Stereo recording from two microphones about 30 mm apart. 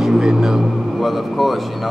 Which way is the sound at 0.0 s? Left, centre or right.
Centre.